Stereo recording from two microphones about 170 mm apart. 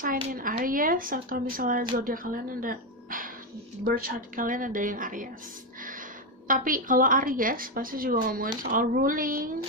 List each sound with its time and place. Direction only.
0.0 s a woman's voice: 55° right (ahead or behind)
6.4 s a woman's voice: 55° right (ahead or behind)